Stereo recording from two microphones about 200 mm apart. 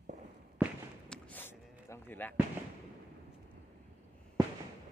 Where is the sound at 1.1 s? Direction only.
10° left (ahead or behind).